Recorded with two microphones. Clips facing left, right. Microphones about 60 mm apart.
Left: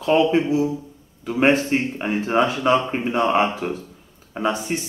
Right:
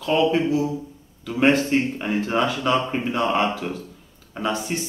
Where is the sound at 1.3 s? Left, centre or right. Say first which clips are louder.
Left 1 dB; left.